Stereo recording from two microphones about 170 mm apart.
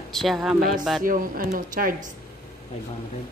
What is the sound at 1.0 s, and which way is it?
A woman's voice, 55° right (ahead or behind).